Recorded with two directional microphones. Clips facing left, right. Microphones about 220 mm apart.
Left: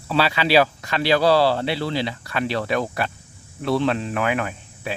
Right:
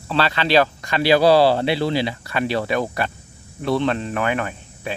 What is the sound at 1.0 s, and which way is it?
Speech, 10° right (ahead or behind).